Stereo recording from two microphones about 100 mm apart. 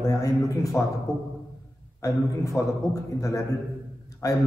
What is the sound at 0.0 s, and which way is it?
Speech, 30° left (ahead or behind).